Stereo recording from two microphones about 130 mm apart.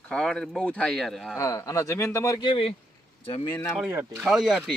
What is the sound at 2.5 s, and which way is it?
Speech, 45° left (ahead or behind).